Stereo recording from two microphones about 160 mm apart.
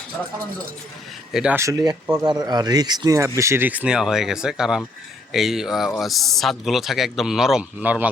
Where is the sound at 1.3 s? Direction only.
5° right (ahead or behind).